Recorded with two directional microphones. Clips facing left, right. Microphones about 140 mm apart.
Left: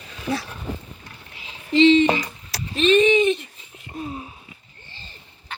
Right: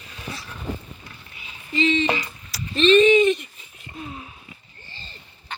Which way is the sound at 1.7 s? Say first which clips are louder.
Left 8 dB; 80° left.